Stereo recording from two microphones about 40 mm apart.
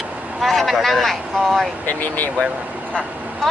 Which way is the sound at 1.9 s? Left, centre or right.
Left.